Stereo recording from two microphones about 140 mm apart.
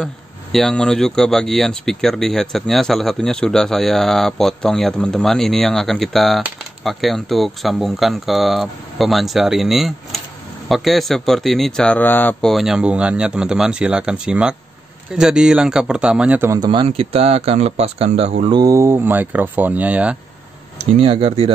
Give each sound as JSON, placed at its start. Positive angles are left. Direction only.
{"t": 0.0, "sound": "speech", "side_deg": 5}
{"t": 16.4, "sound": "speech", "side_deg": -30}
{"t": 16.8, "sound": "speech", "side_deg": -45}
{"t": 18.5, "sound": "speech", "side_deg": -25}
{"t": 20.7, "sound": "speech", "side_deg": -45}